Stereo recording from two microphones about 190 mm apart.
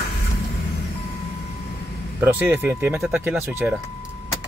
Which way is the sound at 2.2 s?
10° right (ahead or behind).